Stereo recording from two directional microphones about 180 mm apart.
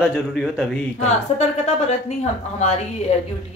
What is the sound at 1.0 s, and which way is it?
A woman's voice, 40° left (ahead or behind).